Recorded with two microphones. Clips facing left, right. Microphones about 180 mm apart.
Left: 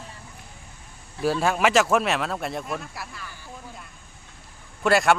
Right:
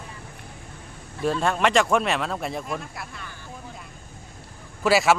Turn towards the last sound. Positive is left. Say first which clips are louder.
# even
turn(degrees=0)  # may be behind; listen again after turning